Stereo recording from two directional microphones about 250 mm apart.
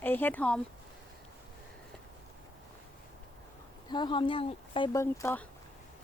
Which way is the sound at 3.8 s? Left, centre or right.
Centre.